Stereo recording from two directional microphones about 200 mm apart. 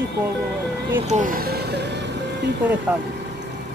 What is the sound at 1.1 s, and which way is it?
Speech, 40° right (ahead or behind).